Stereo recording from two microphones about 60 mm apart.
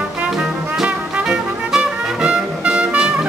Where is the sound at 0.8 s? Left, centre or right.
Centre.